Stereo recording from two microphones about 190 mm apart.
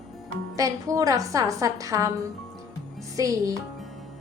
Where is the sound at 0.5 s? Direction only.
15° right (ahead or behind).